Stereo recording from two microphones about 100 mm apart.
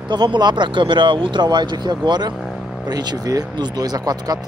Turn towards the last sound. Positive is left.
turn(degrees=-40)  # may be behind; listen again after turning